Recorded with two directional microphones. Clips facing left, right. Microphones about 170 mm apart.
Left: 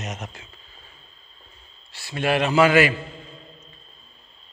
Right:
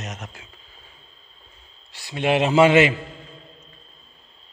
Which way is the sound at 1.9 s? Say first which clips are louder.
Right 2 dB; 15° right (ahead or behind).